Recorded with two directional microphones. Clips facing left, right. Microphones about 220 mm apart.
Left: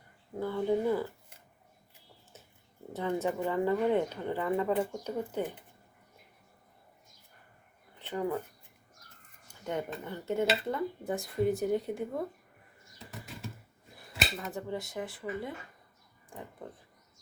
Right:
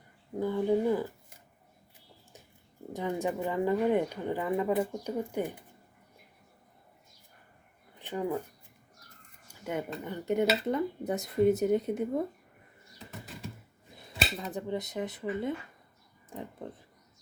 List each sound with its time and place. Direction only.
0.3 s speech: 15° right (ahead or behind)
2.9 s speech: 15° right (ahead or behind)
7.9 s speech: 15° right (ahead or behind)
9.5 s a sound: 10° right (ahead or behind)
10.0 s speech: 15° right (ahead or behind)
14.3 s speech: 20° right (ahead or behind)